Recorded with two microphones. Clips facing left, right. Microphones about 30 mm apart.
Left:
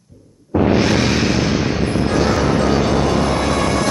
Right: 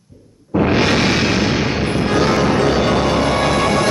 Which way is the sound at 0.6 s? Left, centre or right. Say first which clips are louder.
Right 1 dB; right.